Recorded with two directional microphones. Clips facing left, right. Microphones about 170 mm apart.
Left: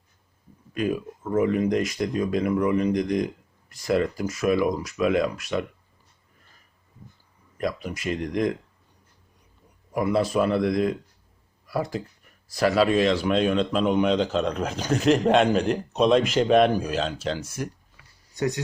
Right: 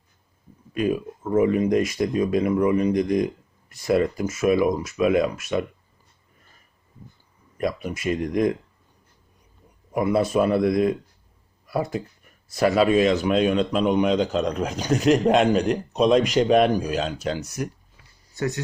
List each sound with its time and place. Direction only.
0.7 s speech: 20° right (ahead or behind)
8.2 s speech: 20° right (ahead or behind)
9.9 s speech: 20° right (ahead or behind)
13.2 s a man's voice: 10° right (ahead or behind)
18.3 s speech: 15° left (ahead or behind)